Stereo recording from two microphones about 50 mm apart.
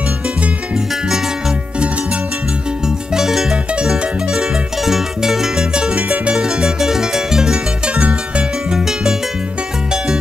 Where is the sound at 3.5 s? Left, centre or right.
Centre.